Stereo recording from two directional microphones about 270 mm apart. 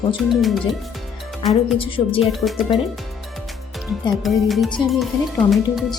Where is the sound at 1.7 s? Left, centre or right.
Centre.